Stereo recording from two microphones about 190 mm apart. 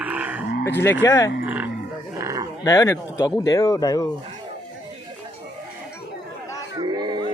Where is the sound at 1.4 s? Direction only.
10° right (ahead or behind).